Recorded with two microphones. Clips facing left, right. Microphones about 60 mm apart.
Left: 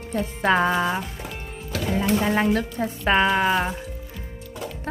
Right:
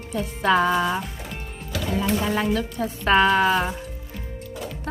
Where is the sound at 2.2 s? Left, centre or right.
Left.